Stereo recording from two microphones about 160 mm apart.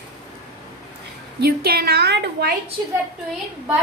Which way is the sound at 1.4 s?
80° right.